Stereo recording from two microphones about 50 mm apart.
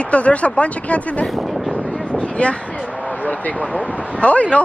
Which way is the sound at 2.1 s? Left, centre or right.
Left.